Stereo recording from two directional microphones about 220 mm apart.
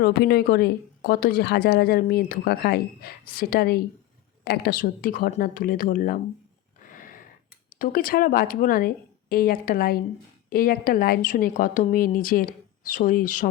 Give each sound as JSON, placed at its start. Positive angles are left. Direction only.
{"t": 0.0, "sound": "a woman's voice", "side_deg": 45}
{"t": 6.8, "sound": "a sound", "side_deg": 40}
{"t": 7.7, "sound": "a woman's voice", "side_deg": 40}